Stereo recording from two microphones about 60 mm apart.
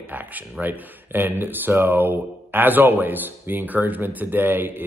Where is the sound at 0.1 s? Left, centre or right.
Right.